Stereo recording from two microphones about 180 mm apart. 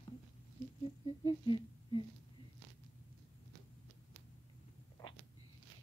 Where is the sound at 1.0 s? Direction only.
30° left (ahead or behind).